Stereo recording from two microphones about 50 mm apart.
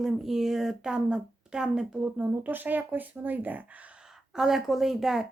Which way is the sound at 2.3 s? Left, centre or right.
Right.